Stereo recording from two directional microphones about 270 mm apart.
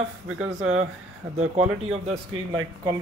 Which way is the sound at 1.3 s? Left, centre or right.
Right.